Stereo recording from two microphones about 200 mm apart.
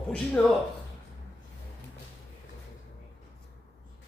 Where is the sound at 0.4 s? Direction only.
5° left (ahead or behind).